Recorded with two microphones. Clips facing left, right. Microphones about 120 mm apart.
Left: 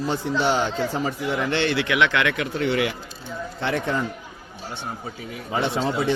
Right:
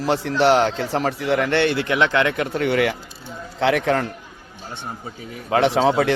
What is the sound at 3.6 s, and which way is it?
Speech, 85° right.